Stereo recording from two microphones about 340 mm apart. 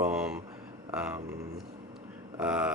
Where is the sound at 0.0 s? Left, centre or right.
Centre.